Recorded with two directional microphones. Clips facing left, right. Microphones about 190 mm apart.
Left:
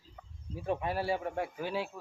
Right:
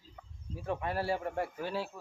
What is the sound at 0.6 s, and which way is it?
Speech, 20° left (ahead or behind).